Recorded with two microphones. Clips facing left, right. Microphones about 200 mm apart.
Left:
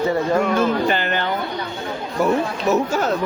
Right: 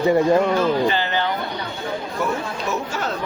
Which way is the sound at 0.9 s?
55° left (ahead or behind).